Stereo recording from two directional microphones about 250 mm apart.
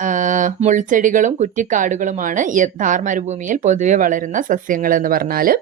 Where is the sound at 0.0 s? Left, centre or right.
Right.